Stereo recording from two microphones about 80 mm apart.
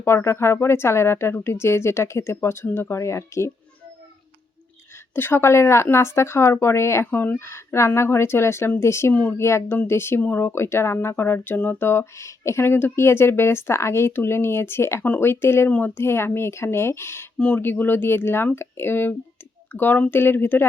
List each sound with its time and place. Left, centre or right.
0.0 s speech: left
5.1 s speech: left
7.1 s speech: left
17.3 s speech: centre
17.6 s speech: left